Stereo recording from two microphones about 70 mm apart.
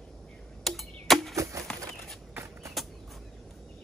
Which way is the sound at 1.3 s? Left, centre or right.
Right.